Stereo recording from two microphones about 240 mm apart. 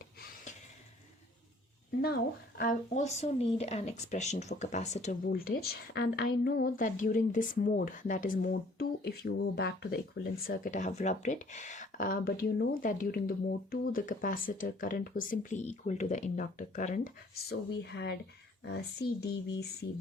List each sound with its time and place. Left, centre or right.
2.6 s speech: left